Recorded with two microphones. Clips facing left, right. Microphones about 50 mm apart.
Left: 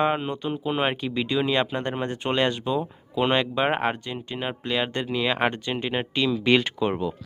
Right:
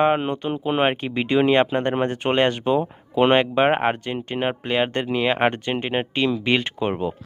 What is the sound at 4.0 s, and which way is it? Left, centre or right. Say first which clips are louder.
Speech: right 6 dB; right.